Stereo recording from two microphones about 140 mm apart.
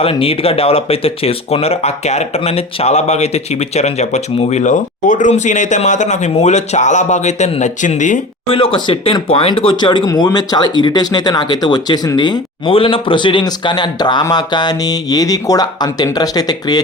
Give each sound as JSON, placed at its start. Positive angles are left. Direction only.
{"t": 0.0, "sound": "speech", "side_deg": 40}
{"t": 8.4, "sound": "speech", "side_deg": 40}